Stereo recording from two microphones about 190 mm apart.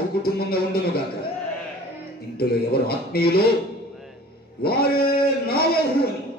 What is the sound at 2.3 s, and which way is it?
A man's voice, 55° left (ahead or behind).